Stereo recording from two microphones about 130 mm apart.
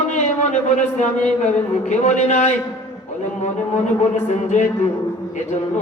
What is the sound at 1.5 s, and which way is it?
A man's voice, 65° left (ahead or behind).